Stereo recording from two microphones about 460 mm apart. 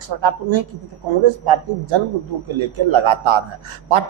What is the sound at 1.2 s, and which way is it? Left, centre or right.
A man's voice, right.